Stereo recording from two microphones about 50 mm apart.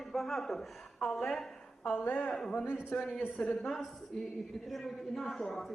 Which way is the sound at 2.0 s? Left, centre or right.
Left.